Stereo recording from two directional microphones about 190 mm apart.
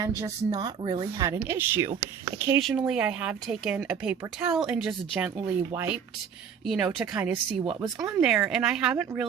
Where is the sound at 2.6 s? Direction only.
Centre (ahead or behind).